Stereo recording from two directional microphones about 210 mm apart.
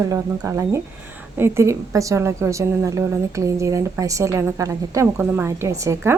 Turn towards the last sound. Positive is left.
turn(degrees=-15)  # may be behind; listen again after turning